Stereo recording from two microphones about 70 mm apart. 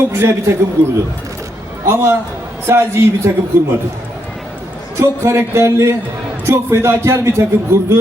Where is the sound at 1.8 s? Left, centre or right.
Right.